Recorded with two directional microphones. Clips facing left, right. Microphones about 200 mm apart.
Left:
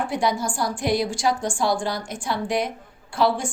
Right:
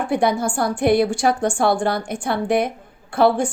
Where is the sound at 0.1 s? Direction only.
60° right (ahead or behind).